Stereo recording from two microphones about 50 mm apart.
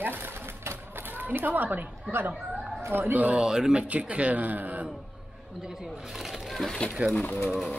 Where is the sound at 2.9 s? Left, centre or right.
Right.